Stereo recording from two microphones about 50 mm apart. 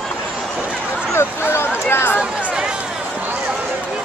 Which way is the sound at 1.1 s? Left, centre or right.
Left.